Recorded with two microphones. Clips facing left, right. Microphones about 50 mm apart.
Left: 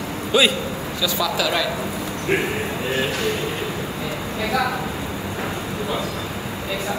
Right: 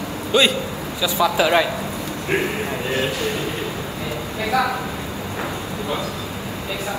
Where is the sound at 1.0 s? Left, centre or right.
Right.